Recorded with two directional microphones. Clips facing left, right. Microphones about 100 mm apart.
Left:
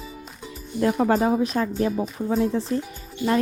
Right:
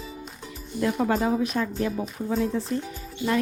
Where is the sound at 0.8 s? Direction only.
40° left (ahead or behind).